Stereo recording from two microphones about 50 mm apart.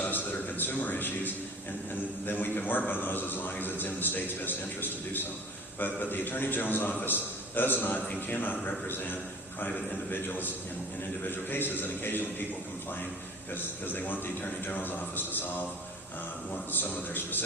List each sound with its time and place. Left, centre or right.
0.0 s a sound: left
2.2 s a man's voice: left
13.5 s a man's voice: left
16.7 s a man's voice: left